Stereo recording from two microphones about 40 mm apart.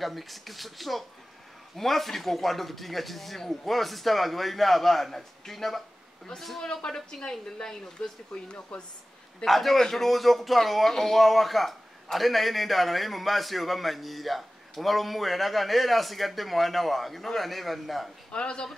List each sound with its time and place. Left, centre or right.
0.0 s a man's voice: centre
6.6 s speech: centre
9.5 s a man's voice: centre
18.3 s speech: left